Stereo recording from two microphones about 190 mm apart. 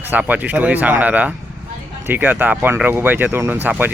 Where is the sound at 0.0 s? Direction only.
10° right (ahead or behind).